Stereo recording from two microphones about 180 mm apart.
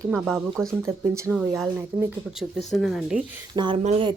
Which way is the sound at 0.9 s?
15° right (ahead or behind).